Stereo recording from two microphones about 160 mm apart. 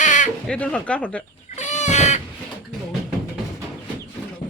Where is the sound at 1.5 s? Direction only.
45° left (ahead or behind).